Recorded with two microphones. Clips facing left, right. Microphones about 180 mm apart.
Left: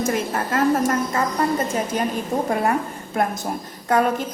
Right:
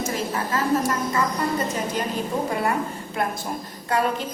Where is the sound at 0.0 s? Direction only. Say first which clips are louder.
Left 4 dB; 55° left (ahead or behind).